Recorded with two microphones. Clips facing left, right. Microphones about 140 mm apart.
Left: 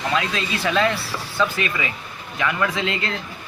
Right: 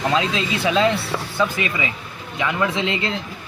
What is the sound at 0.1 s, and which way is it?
Speech, 20° right (ahead or behind).